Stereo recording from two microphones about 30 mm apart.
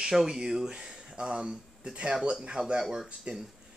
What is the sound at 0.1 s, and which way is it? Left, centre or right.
Speech, centre.